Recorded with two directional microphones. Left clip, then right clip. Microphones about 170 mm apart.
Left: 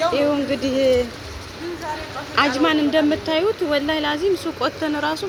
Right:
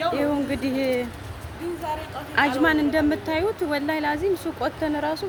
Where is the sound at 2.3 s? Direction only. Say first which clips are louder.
Left 2 dB; 20° right (ahead or behind).